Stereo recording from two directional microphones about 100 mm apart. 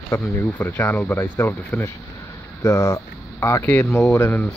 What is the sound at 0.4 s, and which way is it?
Speech, 20° left (ahead or behind).